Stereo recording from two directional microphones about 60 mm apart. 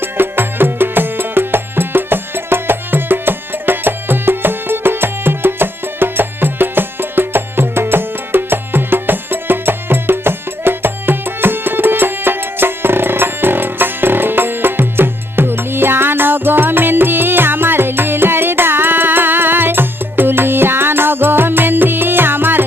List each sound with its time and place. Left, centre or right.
0.0 s music: right